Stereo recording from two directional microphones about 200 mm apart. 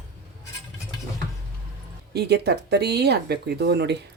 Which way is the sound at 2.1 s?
55° right (ahead or behind).